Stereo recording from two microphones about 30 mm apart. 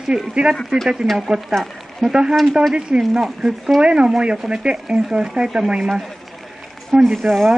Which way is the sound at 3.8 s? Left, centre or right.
Right.